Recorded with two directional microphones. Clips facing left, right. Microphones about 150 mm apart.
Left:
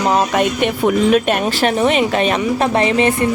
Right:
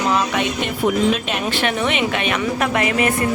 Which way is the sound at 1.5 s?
35° left (ahead or behind).